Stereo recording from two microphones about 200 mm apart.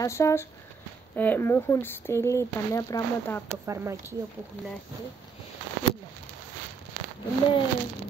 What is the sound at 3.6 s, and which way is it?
Speech, 15° right (ahead or behind).